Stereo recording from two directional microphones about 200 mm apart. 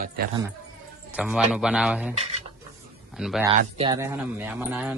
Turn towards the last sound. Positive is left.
turn(degrees=-10)  # may be behind; listen again after turning